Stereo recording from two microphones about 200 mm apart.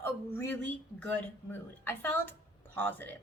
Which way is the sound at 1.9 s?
10° left (ahead or behind).